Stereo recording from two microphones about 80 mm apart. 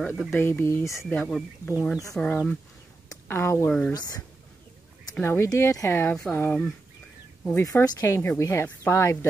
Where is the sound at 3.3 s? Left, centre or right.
Left.